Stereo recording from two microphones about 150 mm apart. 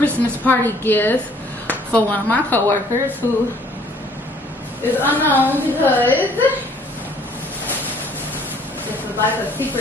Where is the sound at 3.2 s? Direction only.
15° right (ahead or behind).